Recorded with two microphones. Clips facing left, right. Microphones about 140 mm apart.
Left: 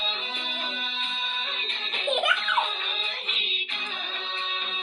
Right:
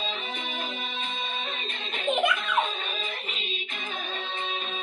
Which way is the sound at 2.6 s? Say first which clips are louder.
Right 1 dB; 45° right (ahead or behind).